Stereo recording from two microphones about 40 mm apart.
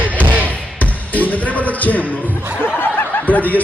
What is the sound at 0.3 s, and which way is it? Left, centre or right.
Basketball bounce, right.